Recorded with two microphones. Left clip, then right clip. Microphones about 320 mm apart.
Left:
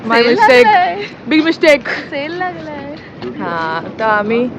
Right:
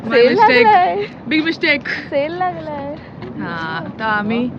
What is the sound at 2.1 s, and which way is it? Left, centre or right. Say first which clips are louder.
Speech: right 2 dB; right.